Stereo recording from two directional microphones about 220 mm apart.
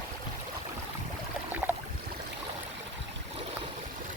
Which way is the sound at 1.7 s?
10° right (ahead or behind).